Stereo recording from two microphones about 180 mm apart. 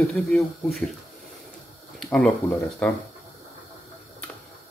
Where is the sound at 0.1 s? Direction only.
Centre (ahead or behind).